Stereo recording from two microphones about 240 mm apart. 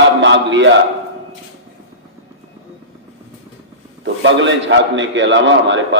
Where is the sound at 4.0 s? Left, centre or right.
Right.